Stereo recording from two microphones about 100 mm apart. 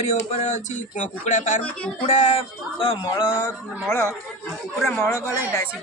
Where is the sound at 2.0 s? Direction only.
90° left.